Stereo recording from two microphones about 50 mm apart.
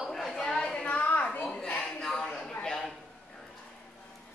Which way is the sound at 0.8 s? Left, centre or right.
Left.